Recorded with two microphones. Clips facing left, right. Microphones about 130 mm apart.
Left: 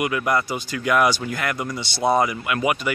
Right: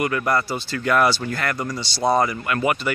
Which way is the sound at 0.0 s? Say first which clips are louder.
Even; 10° left (ahead or behind).